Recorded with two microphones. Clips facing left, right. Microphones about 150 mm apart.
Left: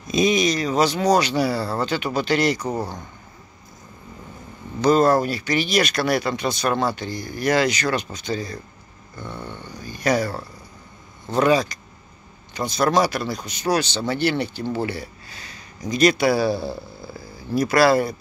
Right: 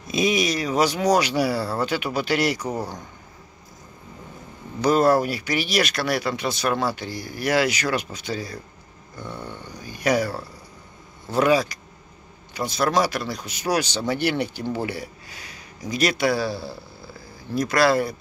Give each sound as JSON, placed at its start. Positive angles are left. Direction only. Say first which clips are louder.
{"t": 0.1, "sound": "speech", "louder": "left 3 dB", "side_deg": -5}
{"t": 4.8, "sound": "speech", "louder": "left 1 dB", "side_deg": -10}
{"t": 16.3, "sound": "a man's voice", "louder": "left 5 dB", "side_deg": 15}
{"t": 17.6, "sound": "speech", "louder": "left 3 dB", "side_deg": 5}